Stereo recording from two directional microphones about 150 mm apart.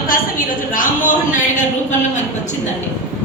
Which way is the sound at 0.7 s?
60° left (ahead or behind).